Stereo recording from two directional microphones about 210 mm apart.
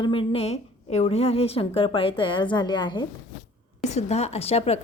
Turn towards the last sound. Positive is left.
turn(degrees=30)  # may be behind; listen again after turning